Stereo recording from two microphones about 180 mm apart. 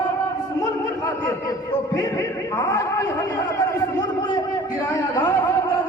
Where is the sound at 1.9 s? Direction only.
15° left (ahead or behind).